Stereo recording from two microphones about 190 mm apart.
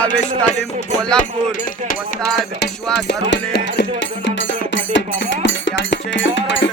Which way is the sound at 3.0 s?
65° left (ahead or behind).